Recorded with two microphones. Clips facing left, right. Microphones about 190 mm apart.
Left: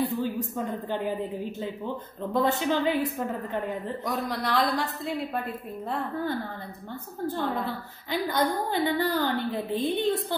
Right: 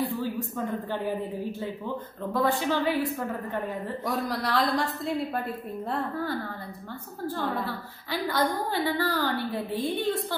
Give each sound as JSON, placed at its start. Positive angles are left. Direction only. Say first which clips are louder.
{"t": 0.2, "sound": "a woman's voice", "louder": "left 1 dB", "side_deg": 20}
{"t": 4.0, "sound": "speech", "louder": "right 2 dB", "side_deg": 0}
{"t": 7.2, "sound": "a woman's voice", "louder": "left 1 dB", "side_deg": 20}